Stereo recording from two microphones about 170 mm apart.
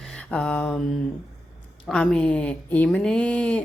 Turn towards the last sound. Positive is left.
turn(degrees=5)  # may be behind; listen again after turning